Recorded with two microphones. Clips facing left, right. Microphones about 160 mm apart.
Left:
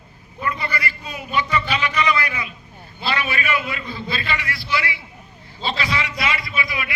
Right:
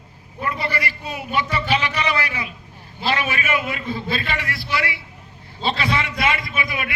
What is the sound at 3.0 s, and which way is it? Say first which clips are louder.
A man's voice: right 1 dB; 45° right (ahead or behind).